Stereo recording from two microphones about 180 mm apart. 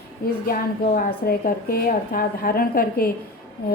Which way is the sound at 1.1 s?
55° left (ahead or behind).